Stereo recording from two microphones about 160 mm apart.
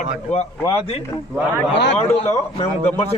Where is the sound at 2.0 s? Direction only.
40° left (ahead or behind).